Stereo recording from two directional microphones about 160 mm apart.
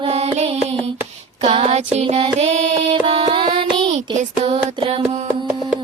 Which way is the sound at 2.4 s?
45° right (ahead or behind).